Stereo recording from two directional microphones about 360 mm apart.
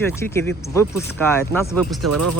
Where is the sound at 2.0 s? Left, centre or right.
Right.